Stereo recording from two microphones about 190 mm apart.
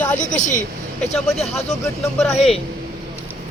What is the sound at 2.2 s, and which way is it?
Speech, centre (ahead or behind).